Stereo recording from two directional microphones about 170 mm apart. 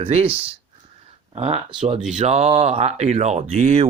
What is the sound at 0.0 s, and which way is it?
Speech, 35° right (ahead or behind).